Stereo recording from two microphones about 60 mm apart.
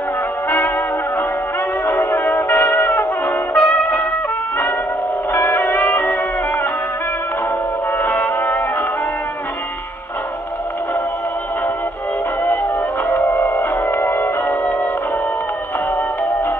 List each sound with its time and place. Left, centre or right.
1.9 s music: left
3.5 s trumpet: left
5.3 s music: left
8.0 s music: left
13.1 s music: left